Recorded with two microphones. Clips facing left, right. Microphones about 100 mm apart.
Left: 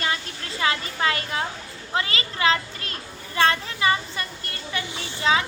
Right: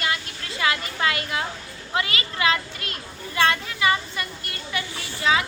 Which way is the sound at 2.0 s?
30° left (ahead or behind).